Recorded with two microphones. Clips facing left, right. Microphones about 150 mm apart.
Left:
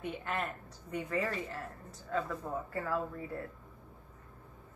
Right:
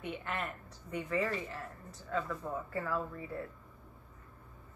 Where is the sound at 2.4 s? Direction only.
20° left (ahead or behind).